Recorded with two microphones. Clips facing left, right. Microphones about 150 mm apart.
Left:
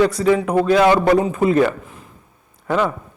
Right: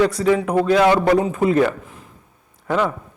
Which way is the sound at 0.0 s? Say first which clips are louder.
Left 1 dB; 20° left (ahead or behind).